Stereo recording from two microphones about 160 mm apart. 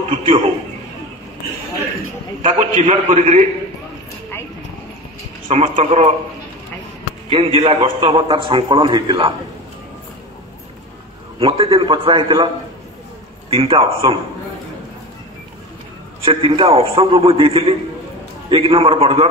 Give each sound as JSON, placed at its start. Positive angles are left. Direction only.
{"t": 0.1, "sound": "speech", "side_deg": -35}
{"t": 2.6, "sound": "a man's voice", "side_deg": -50}
{"t": 5.5, "sound": "a man's voice", "side_deg": -45}
{"t": 7.2, "sound": "a man's voice", "side_deg": -35}
{"t": 11.3, "sound": "a man's voice", "side_deg": -35}
{"t": 13.5, "sound": "a man's voice", "side_deg": -35}
{"t": 16.3, "sound": "a man's voice", "side_deg": -30}